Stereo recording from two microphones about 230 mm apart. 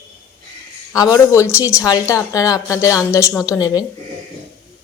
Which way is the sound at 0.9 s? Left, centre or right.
Centre.